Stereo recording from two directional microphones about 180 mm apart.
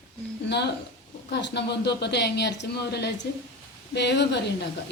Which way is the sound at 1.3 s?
75° left (ahead or behind).